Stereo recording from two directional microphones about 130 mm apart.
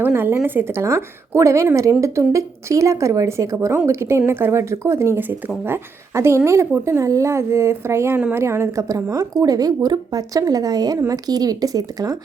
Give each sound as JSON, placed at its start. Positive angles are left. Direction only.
{"t": 0.0, "sound": "a woman's voice", "side_deg": -15}